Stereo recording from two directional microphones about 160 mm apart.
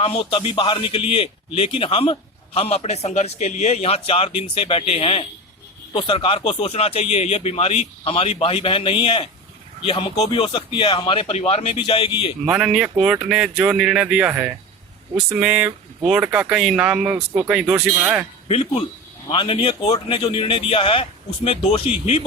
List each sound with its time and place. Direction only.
0.0 s speech: 40° left (ahead or behind)
12.5 s speech: 5° right (ahead or behind)
18.4 s speech: 40° left (ahead or behind)